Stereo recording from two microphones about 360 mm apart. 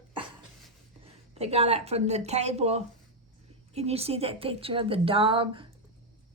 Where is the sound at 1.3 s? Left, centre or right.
Centre.